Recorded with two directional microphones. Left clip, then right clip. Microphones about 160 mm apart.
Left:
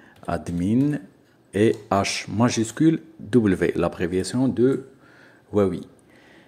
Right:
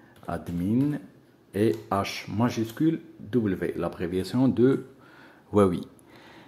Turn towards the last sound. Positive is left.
turn(degrees=-5)  # may be behind; listen again after turning